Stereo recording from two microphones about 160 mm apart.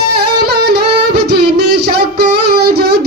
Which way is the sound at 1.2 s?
90° right.